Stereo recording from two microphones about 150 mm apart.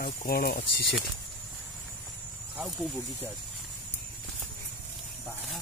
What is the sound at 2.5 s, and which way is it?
Speech, 5° right (ahead or behind).